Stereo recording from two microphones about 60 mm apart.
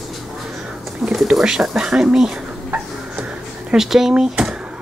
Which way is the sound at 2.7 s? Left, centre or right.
Centre.